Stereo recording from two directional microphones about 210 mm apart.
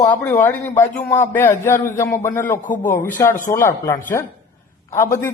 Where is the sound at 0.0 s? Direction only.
10° left (ahead or behind).